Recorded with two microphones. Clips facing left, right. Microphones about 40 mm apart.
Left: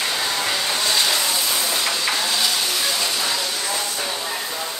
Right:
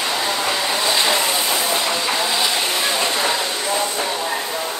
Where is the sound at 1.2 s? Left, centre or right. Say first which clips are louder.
Right 3 dB; right.